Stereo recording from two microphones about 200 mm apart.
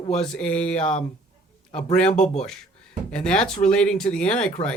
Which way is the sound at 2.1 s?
35° left (ahead or behind).